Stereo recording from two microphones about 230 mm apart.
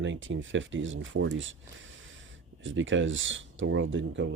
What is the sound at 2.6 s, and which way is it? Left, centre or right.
Speech, right.